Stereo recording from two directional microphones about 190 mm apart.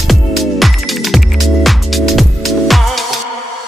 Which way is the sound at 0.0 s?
Centre (ahead or behind).